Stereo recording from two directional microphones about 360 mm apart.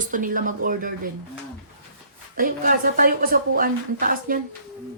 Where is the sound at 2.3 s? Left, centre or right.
Right.